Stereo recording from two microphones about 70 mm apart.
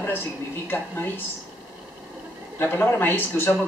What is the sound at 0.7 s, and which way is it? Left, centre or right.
Speech, left.